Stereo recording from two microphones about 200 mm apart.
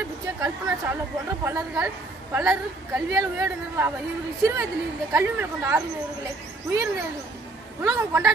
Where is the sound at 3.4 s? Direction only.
10° right (ahead or behind).